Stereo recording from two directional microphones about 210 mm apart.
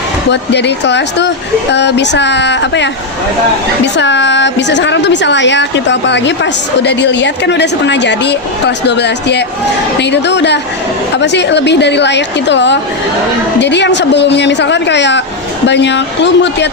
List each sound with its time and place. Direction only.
0.3 s a woman's voice: 55° left (ahead or behind)
3.9 s a woman's voice: 55° left (ahead or behind)